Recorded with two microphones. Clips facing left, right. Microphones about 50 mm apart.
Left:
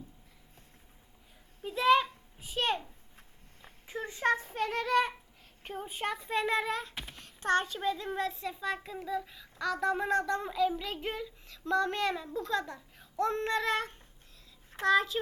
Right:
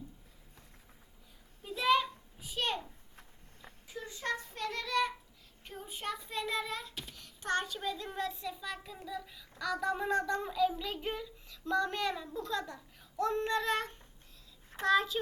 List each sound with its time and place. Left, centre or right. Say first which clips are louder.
1.6 s a sound: left 4 dB; left
4.4 s child singing: left 6 dB; left
5.6 s a child's voice: left 5 dB; left; by 9.6 s centre
9.6 s a child's voice: left 3 dB; left
13.1 s a sound: left 2 dB; left
14.8 s a child's voice: left 2 dB; left